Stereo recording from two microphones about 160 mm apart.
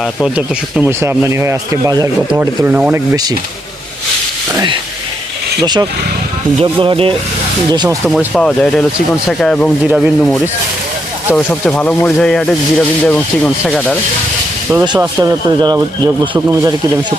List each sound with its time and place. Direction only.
0.3 s speech: 10° right (ahead or behind)
5.6 s speech: 25° right (ahead or behind)
7.7 s speech: 25° right (ahead or behind)
8.3 s speech: 5° left (ahead or behind)
14.7 s speech: 15° right (ahead or behind)
15.2 s speech: 25° right (ahead or behind)